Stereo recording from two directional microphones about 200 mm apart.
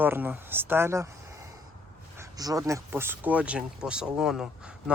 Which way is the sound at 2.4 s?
15° right (ahead or behind).